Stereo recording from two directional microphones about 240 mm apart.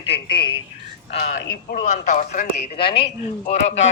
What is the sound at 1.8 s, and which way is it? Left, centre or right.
A man's voice, left.